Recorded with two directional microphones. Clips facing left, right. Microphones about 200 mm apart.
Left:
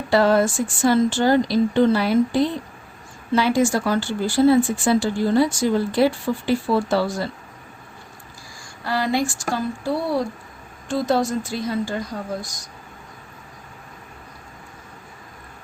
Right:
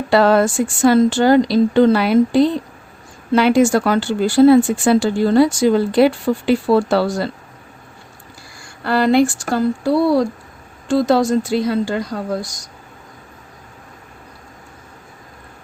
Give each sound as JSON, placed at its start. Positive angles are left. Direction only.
{"t": 0.1, "sound": "speech", "side_deg": -75}
{"t": 3.3, "sound": "speech", "side_deg": -65}
{"t": 8.8, "sound": "speech", "side_deg": -65}
{"t": 10.8, "sound": "speech", "side_deg": -90}